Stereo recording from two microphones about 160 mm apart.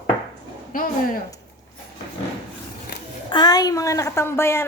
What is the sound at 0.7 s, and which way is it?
Speech, 60° left (ahead or behind).